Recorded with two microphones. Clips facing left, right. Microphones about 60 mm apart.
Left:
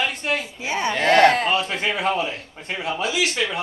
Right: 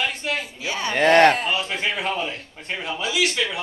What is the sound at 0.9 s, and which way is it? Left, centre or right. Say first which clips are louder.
Speech: right 1 dB; right.